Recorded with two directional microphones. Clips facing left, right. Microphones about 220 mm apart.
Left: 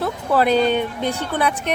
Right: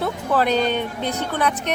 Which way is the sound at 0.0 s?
10° left (ahead or behind).